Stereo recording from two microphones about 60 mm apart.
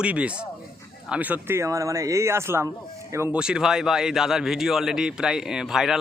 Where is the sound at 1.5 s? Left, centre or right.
Right.